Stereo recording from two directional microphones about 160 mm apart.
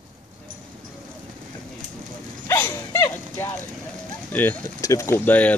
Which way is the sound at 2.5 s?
15° left (ahead or behind).